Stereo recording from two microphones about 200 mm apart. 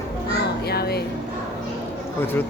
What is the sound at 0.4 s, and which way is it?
Music, 50° left (ahead or behind).